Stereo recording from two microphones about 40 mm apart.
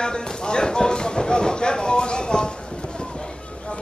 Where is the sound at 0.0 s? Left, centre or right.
Left.